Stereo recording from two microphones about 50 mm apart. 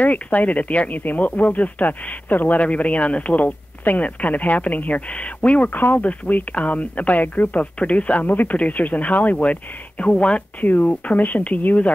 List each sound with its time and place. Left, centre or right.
0.0 s speech: left
10.6 s speech: left